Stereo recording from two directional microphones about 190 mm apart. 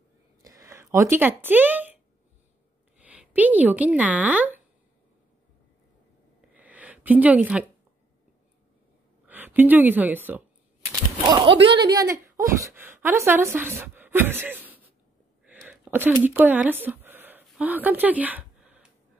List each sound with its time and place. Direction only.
0.4 s speech: 15° right (ahead or behind)
3.0 s speech: 5° right (ahead or behind)
6.5 s a sound: 10° right (ahead or behind)
9.2 s a woman's voice: 10° right (ahead or behind)
10.9 s typewriter: 20° right (ahead or behind)
11.7 s a woman's voice: 20° right (ahead or behind)
17.5 s a sound: 10° right (ahead or behind)